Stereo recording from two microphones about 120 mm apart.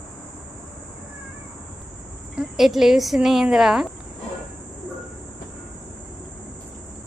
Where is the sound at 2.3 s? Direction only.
5° right (ahead or behind).